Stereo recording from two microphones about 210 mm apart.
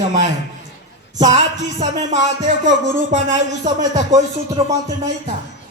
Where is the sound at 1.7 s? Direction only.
35° right (ahead or behind).